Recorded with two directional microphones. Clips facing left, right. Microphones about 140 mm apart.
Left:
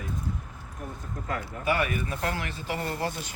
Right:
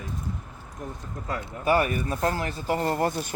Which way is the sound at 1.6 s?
40° right (ahead or behind).